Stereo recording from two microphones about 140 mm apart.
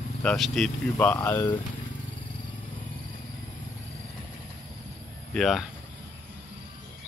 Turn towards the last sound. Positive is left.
turn(degrees=0)  # may be behind; listen again after turning